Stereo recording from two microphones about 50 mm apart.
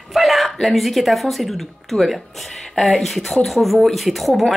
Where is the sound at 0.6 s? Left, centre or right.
Centre.